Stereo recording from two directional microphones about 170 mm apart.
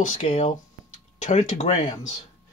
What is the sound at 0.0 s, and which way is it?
Speech, 50° left (ahead or behind).